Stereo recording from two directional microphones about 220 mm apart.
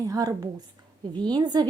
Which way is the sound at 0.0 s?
15° right (ahead or behind).